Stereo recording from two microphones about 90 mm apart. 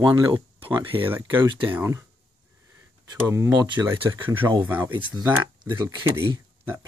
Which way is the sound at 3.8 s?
25° right (ahead or behind).